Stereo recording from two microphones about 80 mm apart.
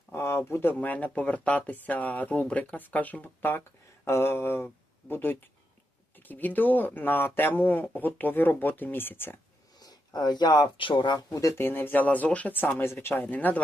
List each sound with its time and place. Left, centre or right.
0.1 s speech: left
9.8 s speech: left
11.3 s speech: left
11.6 s speech: left